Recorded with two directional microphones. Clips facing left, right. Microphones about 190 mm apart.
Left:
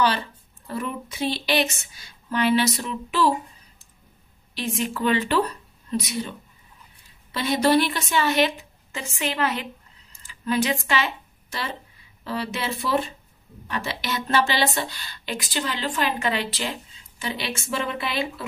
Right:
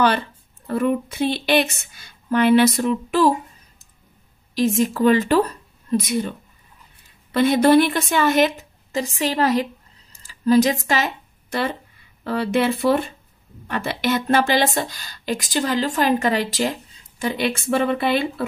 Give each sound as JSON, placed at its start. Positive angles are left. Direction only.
{"t": 0.7, "sound": "a woman's voice", "side_deg": -55}
{"t": 4.6, "sound": "speech", "side_deg": -40}
{"t": 7.3, "sound": "speech", "side_deg": -55}
{"t": 12.3, "sound": "a woman's voice", "side_deg": -55}